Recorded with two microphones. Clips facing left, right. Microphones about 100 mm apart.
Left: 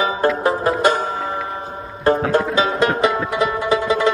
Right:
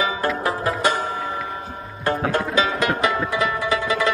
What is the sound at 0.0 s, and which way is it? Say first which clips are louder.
Music: left 5 dB; 30° left (ahead or behind).